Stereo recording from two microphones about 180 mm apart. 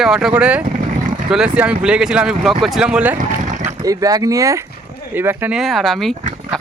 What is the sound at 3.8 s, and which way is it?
Speech, 20° right (ahead or behind).